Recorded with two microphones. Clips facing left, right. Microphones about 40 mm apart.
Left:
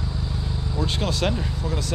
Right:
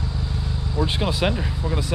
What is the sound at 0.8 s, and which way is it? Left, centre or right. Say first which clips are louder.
Speech: right 2 dB; centre.